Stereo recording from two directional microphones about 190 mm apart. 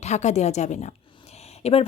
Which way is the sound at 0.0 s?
35° left (ahead or behind).